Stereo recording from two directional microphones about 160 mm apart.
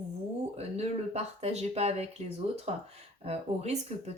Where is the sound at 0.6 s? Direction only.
40° right (ahead or behind).